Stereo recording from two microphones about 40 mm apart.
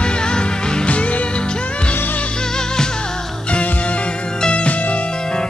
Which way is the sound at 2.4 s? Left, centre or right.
Centre.